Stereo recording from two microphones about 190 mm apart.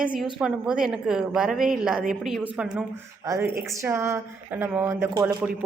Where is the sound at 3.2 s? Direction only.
15° right (ahead or behind).